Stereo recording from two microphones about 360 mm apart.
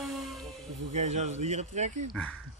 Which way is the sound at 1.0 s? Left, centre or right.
Centre.